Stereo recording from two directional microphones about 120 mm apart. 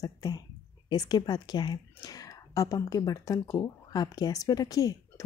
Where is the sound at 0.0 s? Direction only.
30° left (ahead or behind).